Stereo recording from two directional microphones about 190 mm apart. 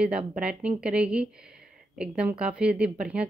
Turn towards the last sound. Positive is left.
turn(degrees=-5)  # may be behind; listen again after turning